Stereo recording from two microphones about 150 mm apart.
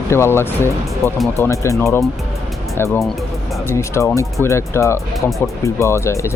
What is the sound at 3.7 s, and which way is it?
Speech, 20° left (ahead or behind).